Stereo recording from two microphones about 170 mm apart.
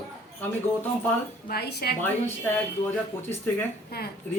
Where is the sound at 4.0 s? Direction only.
65° left (ahead or behind).